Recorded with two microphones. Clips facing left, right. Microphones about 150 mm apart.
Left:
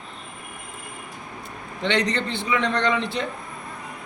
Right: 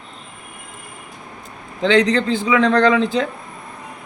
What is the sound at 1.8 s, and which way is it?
A man's voice, 90° right.